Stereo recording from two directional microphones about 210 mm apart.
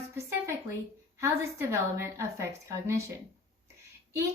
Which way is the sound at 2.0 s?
10° right (ahead or behind).